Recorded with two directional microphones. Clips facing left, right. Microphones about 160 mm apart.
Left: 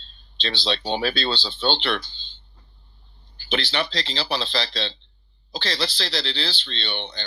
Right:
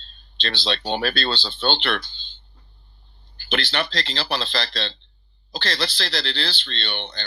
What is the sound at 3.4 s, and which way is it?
Speech, 60° right (ahead or behind).